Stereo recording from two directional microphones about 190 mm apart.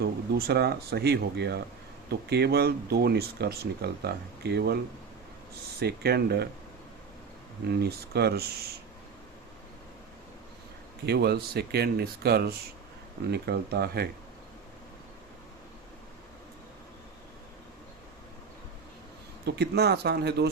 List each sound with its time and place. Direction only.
0.0 s speech: 55° right (ahead or behind)
5.8 s speech: 55° right (ahead or behind)
7.9 s speech: 55° right (ahead or behind)
11.0 s speech: 60° right (ahead or behind)
19.5 s speech: 60° right (ahead or behind)